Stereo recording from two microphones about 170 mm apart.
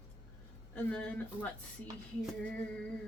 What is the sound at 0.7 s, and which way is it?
Speech, 10° left (ahead or behind).